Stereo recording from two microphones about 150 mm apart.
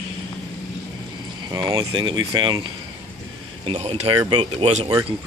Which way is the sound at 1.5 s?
25° right (ahead or behind).